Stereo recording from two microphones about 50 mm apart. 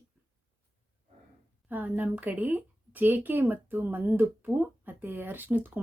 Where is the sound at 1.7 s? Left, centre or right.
Right.